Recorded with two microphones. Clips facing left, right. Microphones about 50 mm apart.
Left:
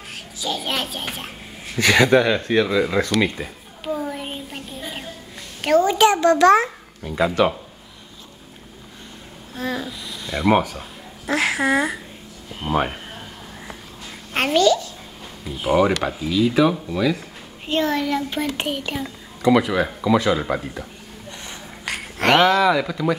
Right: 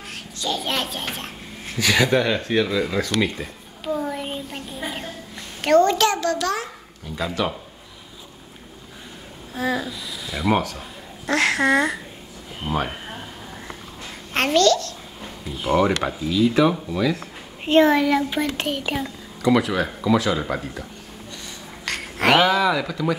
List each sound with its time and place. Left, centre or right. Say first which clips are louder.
0.4 s speech: even; centre
3.2 s a sound: left 2 dB; centre
4.0 s child singing: right 1 dB; centre
5.6 s speech: right 1 dB; centre
5.9 s a child's voice: left 6 dB; centre; by 7.2 s left
7.2 s speech: left 6 dB; centre
9.5 s speech: right 2 dB; centre
10.5 s speech: left 3 dB; centre
12.6 s speech: left 3 dB; centre
14.3 s a child's voice: even; centre
17.6 s a child's voice: right 6 dB; right
17.9 s speech: right 3 dB; centre
21.9 s a sound: even; centre
22.2 s speech: left 2 dB; centre